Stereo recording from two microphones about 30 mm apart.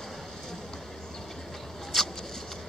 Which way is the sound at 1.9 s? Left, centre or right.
Centre.